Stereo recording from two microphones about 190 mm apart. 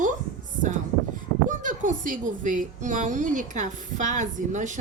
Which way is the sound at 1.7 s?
45° right (ahead or behind).